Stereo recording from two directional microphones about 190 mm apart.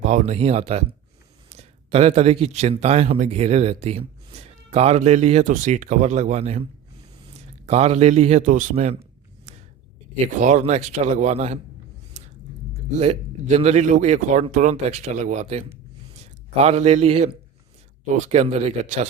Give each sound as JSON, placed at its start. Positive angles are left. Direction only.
{"t": 0.0, "sound": "a man's voice", "side_deg": -40}
{"t": 10.3, "sound": "speech", "side_deg": -40}
{"t": 12.1, "sound": "a sound", "side_deg": -40}
{"t": 13.0, "sound": "speech", "side_deg": -35}